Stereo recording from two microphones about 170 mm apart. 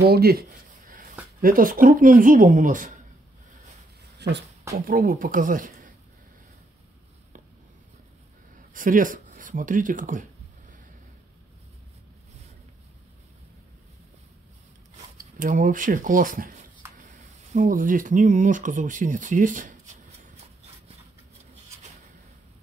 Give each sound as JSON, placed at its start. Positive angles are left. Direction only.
{"t": 0.0, "sound": "speech", "side_deg": -65}
{"t": 1.4, "sound": "speech", "side_deg": -55}
{"t": 4.2, "sound": "speech", "side_deg": -80}
{"t": 4.8, "sound": "speech", "side_deg": -55}
{"t": 8.7, "sound": "speech", "side_deg": -50}
{"t": 15.3, "sound": "speech", "side_deg": -50}